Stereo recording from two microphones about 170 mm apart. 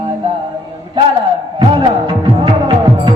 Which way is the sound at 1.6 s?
30° right (ahead or behind).